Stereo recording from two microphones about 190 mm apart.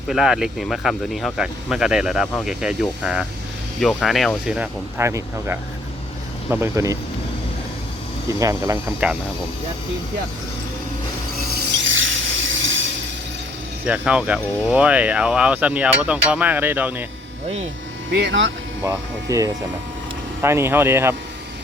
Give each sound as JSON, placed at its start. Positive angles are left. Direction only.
{"t": 0.1, "sound": "speech", "side_deg": -5}
{"t": 8.3, "sound": "speech", "side_deg": -15}
{"t": 11.8, "sound": "a sound", "side_deg": -85}
{"t": 13.8, "sound": "speech", "side_deg": -5}
{"t": 18.1, "sound": "speech", "side_deg": -60}
{"t": 18.8, "sound": "speech", "side_deg": -15}